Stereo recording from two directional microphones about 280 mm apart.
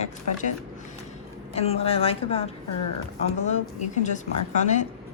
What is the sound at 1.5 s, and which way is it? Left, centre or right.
A woman's voice, left.